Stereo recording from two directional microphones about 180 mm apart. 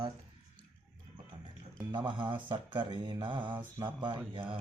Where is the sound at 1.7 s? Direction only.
25° right (ahead or behind).